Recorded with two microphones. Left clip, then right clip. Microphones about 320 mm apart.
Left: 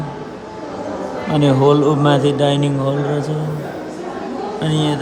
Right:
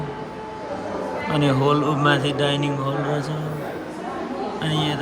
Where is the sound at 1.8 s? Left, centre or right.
Centre.